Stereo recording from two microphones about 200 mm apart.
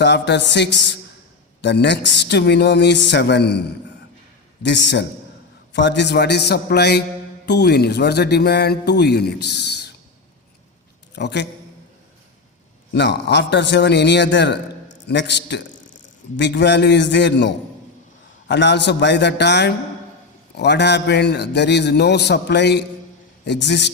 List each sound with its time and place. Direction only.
0.0 s speech: 60° left (ahead or behind)
4.6 s speech: 60° left (ahead or behind)
11.1 s a man's voice: 60° left (ahead or behind)
12.9 s a man's voice: 60° left (ahead or behind)